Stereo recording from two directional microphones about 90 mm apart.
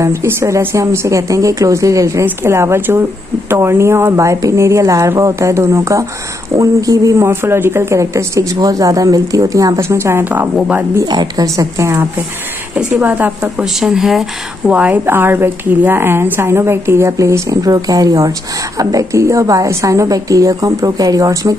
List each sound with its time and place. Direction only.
0.0 s speech: 30° right (ahead or behind)
11.1 s speech: 45° right (ahead or behind)
13.0 s a woman's voice: 20° right (ahead or behind)
13.7 s speech: 5° right (ahead or behind)
14.7 s a woman's voice: 15° right (ahead or behind); by 21.5 s 40° right (ahead or behind)